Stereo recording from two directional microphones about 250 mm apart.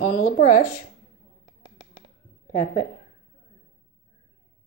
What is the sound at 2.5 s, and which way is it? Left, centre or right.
Speech, left.